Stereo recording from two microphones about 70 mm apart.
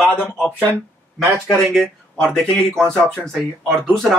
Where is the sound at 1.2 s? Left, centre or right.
Centre.